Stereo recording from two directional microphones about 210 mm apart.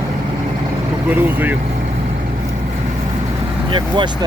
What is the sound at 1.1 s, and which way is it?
Speech, 10° right (ahead or behind).